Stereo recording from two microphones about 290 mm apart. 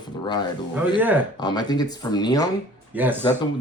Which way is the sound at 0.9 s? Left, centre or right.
Centre.